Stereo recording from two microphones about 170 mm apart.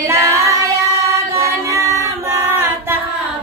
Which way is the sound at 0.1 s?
15° right (ahead or behind).